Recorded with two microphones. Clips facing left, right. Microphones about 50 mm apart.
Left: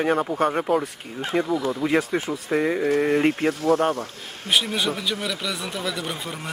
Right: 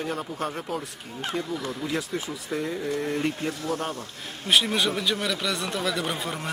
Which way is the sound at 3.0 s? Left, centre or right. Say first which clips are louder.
Left 7 dB; left.